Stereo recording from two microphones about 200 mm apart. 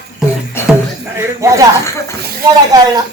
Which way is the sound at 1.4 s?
15° right (ahead or behind).